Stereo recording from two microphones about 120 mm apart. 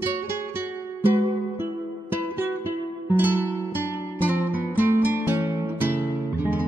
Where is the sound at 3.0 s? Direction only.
15° right (ahead or behind).